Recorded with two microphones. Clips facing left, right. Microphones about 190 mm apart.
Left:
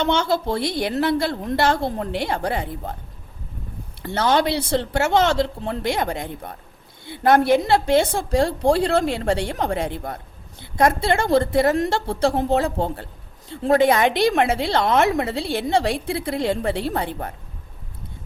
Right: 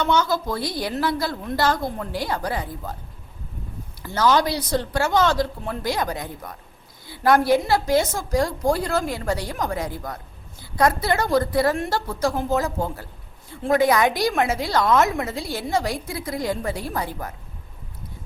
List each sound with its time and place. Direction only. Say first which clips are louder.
0.0 s a woman's voice: left 1 dB; 25° left (ahead or behind)
4.1 s a woman's voice: even; 25° left (ahead or behind)